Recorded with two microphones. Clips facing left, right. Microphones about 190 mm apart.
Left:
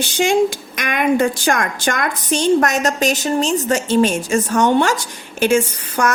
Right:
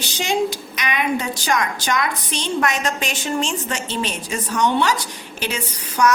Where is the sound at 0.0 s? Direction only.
50° left (ahead or behind).